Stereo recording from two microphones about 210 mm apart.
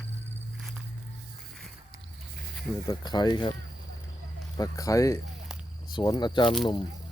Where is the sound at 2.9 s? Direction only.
20° left (ahead or behind).